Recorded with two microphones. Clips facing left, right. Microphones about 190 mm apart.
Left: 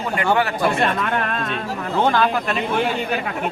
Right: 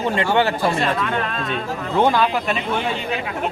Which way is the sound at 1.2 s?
50° left (ahead or behind).